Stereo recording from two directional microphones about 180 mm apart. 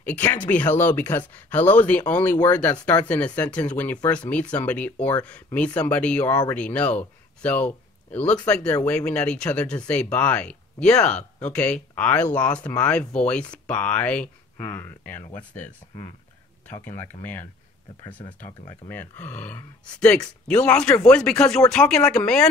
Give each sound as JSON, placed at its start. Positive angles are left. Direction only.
{"t": 0.0, "sound": "speech", "side_deg": 10}
{"t": 11.1, "sound": "speech", "side_deg": 40}
{"t": 11.5, "sound": "speech", "side_deg": 5}
{"t": 18.2, "sound": "speech", "side_deg": 30}
{"t": 18.9, "sound": "speech", "side_deg": 10}